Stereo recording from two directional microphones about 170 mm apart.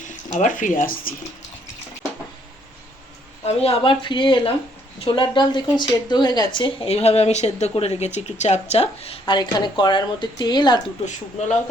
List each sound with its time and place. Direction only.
0.0 s speech: 45° left (ahead or behind)
3.4 s a woman's voice: 35° left (ahead or behind)